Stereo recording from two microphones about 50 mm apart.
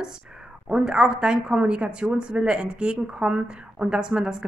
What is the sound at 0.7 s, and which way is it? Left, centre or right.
A woman's voice, centre.